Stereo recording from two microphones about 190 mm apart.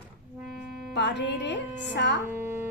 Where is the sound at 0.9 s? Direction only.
70° left (ahead or behind).